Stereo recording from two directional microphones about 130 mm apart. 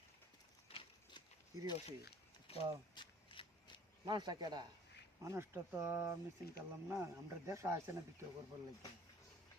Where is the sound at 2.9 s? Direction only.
40° left (ahead or behind).